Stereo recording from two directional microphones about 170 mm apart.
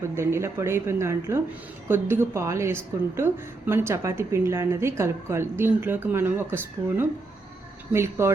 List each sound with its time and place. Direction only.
0.0 s a woman's voice: 15° right (ahead or behind)